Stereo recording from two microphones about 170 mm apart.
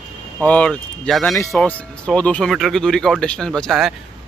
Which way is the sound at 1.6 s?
5° left (ahead or behind).